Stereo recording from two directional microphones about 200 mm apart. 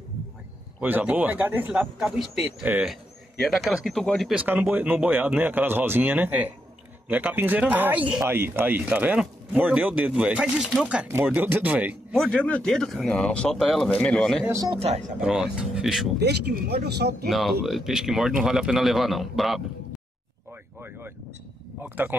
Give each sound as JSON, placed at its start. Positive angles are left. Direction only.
{"t": 0.7, "sound": "speech", "side_deg": -10}
{"t": 14.4, "sound": "speech", "side_deg": -15}
{"t": 14.8, "sound": "speech", "side_deg": -35}
{"t": 15.2, "sound": "speech", "side_deg": -5}
{"t": 16.2, "sound": "speech", "side_deg": -55}
{"t": 17.3, "sound": "speech", "side_deg": 0}
{"t": 21.8, "sound": "speech", "side_deg": -10}